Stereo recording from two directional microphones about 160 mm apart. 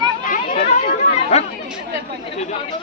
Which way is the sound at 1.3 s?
40° left (ahead or behind).